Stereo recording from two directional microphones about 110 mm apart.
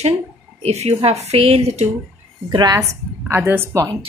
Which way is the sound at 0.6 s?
70° right (ahead or behind).